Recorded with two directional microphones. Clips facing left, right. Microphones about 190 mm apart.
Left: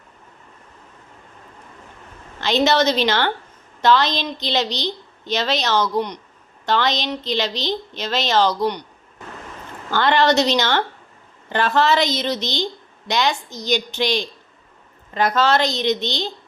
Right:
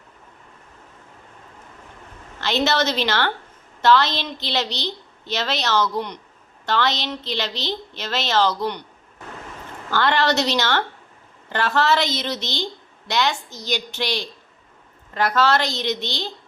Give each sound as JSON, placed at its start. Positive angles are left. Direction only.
{"t": 2.4, "sound": "a woman's voice", "side_deg": 15}
{"t": 9.9, "sound": "a woman's voice", "side_deg": 20}